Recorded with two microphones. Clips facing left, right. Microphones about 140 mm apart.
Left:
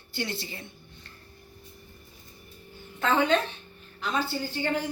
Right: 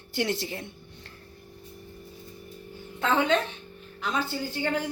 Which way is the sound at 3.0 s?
20° right (ahead or behind).